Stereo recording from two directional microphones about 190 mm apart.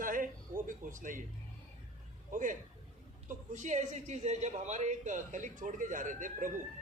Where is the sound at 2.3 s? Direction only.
45° right (ahead or behind).